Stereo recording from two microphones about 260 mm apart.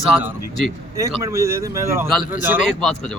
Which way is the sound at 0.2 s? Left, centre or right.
Centre.